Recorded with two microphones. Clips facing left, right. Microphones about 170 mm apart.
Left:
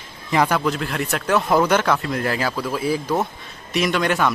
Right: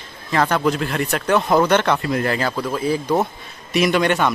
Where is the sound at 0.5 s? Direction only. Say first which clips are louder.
Right 3 dB; centre (ahead or behind).